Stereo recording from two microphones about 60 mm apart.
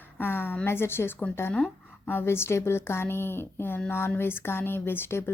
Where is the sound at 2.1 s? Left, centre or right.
Left.